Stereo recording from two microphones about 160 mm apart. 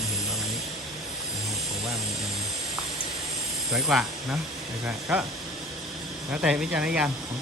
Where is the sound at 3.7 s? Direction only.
5° right (ahead or behind).